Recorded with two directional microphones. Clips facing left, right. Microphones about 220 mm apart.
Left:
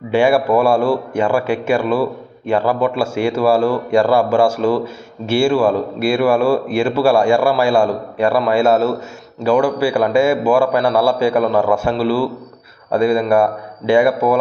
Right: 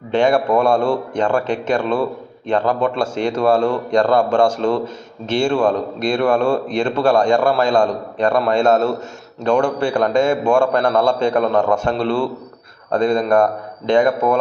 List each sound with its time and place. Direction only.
0.1 s a man's voice: 10° left (ahead or behind)